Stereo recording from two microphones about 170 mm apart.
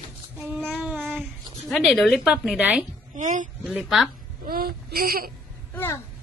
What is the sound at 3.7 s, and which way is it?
Speech, centre (ahead or behind).